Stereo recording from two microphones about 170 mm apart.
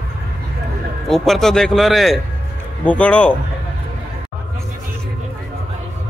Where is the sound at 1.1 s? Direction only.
Centre (ahead or behind).